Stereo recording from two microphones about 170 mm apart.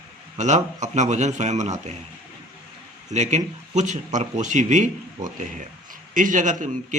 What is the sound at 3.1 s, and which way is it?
A man's voice, 40° right (ahead or behind).